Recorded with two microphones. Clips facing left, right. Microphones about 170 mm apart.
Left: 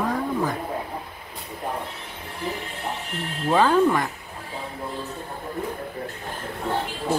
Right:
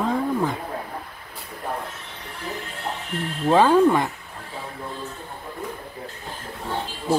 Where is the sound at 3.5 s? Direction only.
15° right (ahead or behind).